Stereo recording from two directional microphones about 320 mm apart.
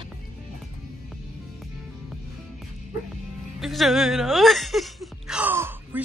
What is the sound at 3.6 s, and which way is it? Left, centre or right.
Speech, centre.